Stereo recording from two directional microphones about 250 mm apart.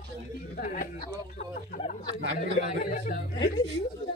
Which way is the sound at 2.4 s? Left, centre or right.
Left.